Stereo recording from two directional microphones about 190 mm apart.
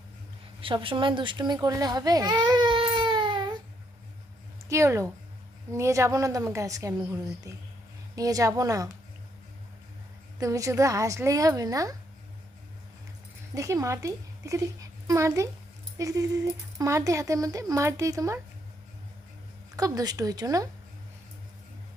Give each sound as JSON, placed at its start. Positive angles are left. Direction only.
{"t": 0.6, "sound": "a child's voice", "side_deg": -25}
{"t": 4.7, "sound": "speech", "side_deg": -15}
{"t": 10.4, "sound": "speech", "side_deg": -15}
{"t": 13.5, "sound": "a woman's voice", "side_deg": -15}
{"t": 19.7, "sound": "speech", "side_deg": -20}